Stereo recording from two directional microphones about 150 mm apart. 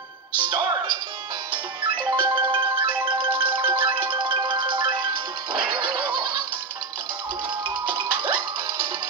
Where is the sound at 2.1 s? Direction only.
30° right (ahead or behind).